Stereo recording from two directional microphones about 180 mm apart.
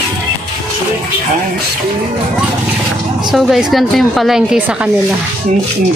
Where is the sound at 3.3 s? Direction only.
Centre (ahead or behind).